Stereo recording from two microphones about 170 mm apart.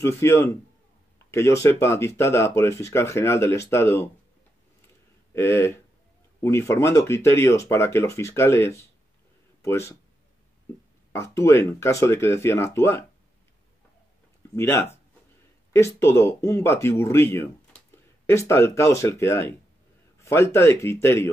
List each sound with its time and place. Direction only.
0.0 s speech: 15° left (ahead or behind)
5.3 s speech: 15° left (ahead or behind)
11.1 s speech: 15° left (ahead or behind)
14.5 s speech: 15° left (ahead or behind)